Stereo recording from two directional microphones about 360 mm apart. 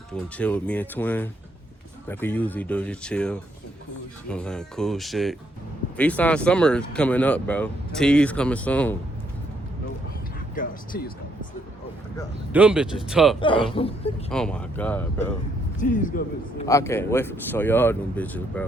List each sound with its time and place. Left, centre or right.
0.1 s speech: centre
10.5 s speech: left
12.5 s speech: centre
13.4 s speech: centre
14.3 s speech: centre
15.8 s a man's voice: left
16.6 s speech: centre